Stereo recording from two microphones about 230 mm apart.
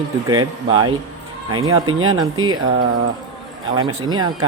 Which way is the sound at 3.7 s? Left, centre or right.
Centre.